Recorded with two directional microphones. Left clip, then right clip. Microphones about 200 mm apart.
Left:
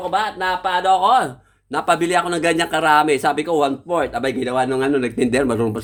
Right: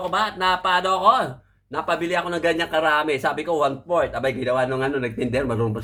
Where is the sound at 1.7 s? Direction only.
55° left (ahead or behind).